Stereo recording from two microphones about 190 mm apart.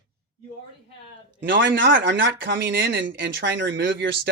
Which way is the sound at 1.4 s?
70° right (ahead or behind).